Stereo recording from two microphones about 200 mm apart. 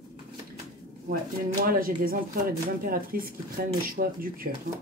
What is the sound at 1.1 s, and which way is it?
Speech, 45° right (ahead or behind).